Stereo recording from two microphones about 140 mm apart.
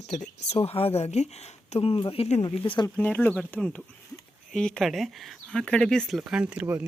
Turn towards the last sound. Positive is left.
turn(degrees=-10)  # may be behind; listen again after turning